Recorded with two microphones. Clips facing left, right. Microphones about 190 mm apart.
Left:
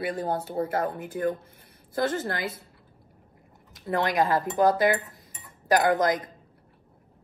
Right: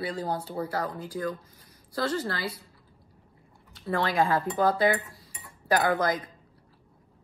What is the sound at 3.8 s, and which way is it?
Speech, 20° left (ahead or behind).